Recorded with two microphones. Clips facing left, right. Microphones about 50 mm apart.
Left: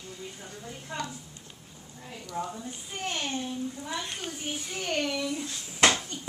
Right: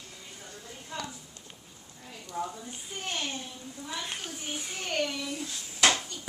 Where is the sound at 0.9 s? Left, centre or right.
Left.